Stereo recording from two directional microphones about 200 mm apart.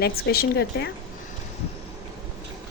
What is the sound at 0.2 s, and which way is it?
Speech, 50° left (ahead or behind).